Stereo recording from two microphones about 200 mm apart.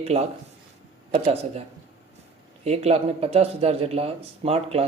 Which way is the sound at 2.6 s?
30° right (ahead or behind).